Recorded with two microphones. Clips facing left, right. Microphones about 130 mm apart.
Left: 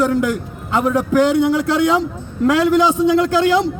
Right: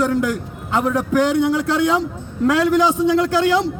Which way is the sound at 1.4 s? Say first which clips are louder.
Left 2 dB; 85° left.